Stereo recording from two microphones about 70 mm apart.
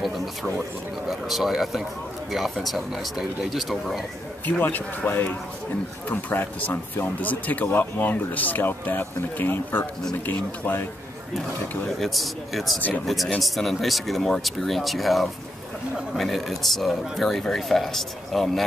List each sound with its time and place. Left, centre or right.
0.0 s a sound: centre
1.0 s speech: centre
4.5 s speech: left
12.0 s speech: centre